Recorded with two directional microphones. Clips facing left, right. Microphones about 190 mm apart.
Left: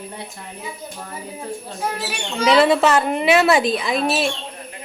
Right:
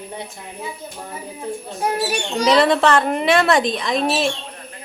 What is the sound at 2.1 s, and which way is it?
Speech, 40° right (ahead or behind).